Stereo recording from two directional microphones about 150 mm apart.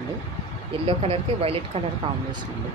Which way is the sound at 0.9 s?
40° right (ahead or behind).